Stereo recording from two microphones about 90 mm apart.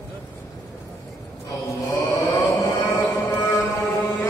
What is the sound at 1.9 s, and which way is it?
Music, 35° left (ahead or behind).